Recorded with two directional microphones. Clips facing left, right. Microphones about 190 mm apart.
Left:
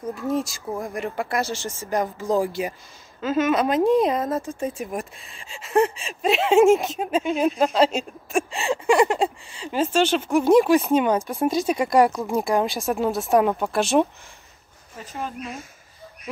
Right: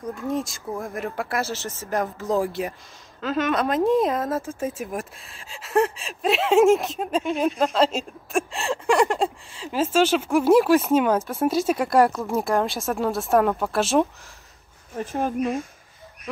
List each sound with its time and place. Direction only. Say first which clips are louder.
0.3 s speech: left 2 dB; centre (ahead or behind)
15.0 s speech: right 8 dB; 50° right (ahead or behind)